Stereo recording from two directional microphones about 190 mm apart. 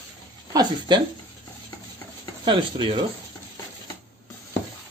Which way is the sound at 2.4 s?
25° right (ahead or behind).